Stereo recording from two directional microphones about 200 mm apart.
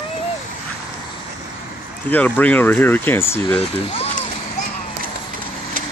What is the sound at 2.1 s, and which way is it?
Speech, 10° left (ahead or behind).